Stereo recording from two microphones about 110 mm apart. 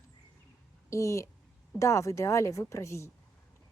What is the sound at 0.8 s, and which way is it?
A woman's voice, 25° left (ahead or behind).